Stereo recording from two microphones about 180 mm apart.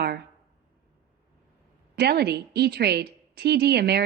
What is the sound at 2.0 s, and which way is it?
A woman's voice, 65° right (ahead or behind).